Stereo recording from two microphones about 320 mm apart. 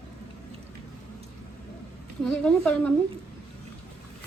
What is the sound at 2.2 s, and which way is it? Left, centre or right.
Speech, centre.